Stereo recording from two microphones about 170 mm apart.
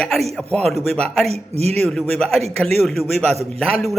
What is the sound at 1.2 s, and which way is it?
Speech, 40° right (ahead or behind).